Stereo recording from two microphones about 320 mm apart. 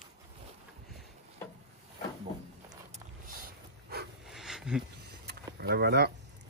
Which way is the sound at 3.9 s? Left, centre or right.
Right.